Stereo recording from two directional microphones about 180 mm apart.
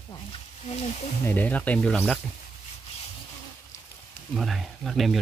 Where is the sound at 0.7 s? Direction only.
35° left (ahead or behind).